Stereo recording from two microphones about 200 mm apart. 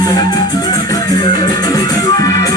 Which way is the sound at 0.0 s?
20° left (ahead or behind).